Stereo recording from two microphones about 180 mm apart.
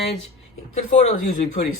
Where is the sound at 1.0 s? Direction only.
35° left (ahead or behind).